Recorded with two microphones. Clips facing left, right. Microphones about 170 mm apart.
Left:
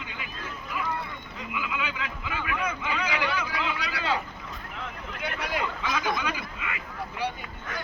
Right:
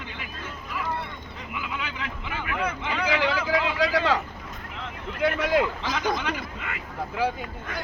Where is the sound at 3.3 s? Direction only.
90° right.